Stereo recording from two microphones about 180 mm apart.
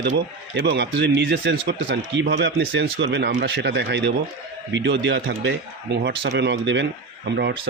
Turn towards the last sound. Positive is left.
turn(degrees=-70)  # may be behind; listen again after turning